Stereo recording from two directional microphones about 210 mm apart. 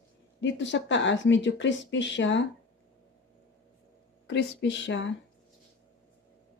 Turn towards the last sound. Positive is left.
turn(degrees=60)  # may be behind; listen again after turning